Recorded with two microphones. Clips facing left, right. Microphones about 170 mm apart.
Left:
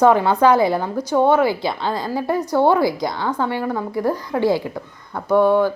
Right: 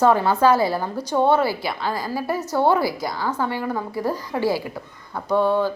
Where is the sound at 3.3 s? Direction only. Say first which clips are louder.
Left 3 dB; 15° left (ahead or behind).